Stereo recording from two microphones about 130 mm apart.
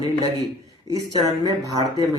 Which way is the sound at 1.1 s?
30° right (ahead or behind).